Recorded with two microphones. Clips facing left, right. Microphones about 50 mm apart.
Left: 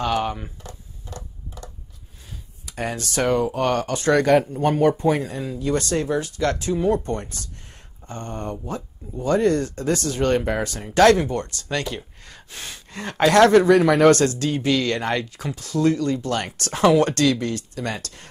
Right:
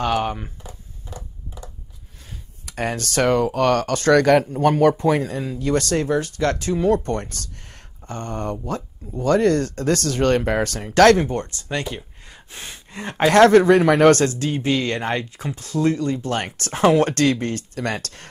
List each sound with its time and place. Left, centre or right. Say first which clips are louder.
0.0 s speech: right 1 dB; right
1.1 s a sound: even; centre
2.6 s speech: right 3 dB; right
4.6 s speech: right 3 dB; right
5.1 s speech: right 2 dB; right
11.1 s speech: right 1 dB; right
13.4 s speech: right 2 dB; right
14.4 s speech: even; right